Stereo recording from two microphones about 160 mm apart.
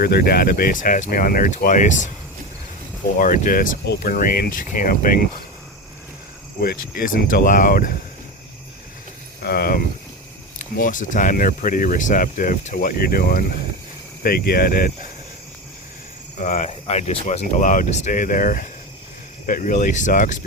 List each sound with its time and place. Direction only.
0.0 s speech: 75° left (ahead or behind); by 2.0 s 50° left (ahead or behind)
3.2 s speech: 55° left (ahead or behind)
6.6 s speech: 65° left (ahead or behind)
9.4 s speech: 75° left (ahead or behind)
10.8 s speech: 55° left (ahead or behind)
16.4 s speech: 50° left (ahead or behind)